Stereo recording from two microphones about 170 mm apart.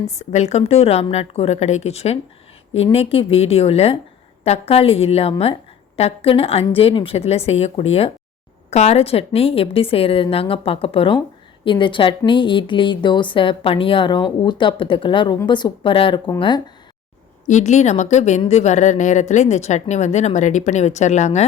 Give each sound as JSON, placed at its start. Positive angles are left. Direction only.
{"t": 0.2, "sound": "a woman's voice", "side_deg": 40}
{"t": 17.5, "sound": "speech", "side_deg": 45}